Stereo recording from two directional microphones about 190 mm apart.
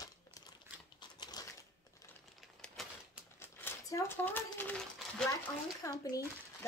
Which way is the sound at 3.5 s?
10° left (ahead or behind).